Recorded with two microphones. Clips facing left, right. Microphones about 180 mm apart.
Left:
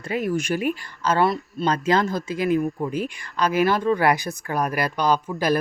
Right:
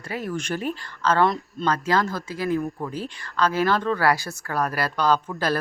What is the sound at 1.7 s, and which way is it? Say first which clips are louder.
Speech: left 2 dB; 20° left (ahead or behind).